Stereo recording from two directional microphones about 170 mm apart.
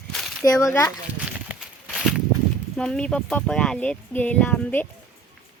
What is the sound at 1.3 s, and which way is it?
Walk, 5° right (ahead or behind).